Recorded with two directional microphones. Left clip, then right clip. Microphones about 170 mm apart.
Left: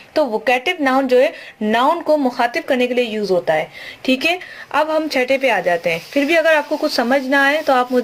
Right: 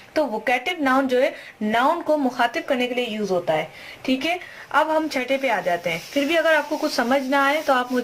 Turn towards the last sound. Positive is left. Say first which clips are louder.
# left 5 dB
turn(degrees=30)  # may be behind; listen again after turning